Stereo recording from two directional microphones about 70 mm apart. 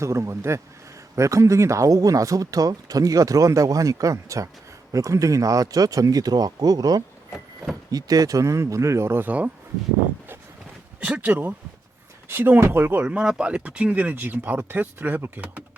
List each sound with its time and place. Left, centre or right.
0.0 s speech: right
11.2 s speech: right
13.1 s speech: centre